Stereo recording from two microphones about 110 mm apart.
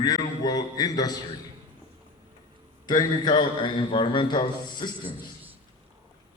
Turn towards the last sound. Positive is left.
turn(degrees=45)  # may be behind; listen again after turning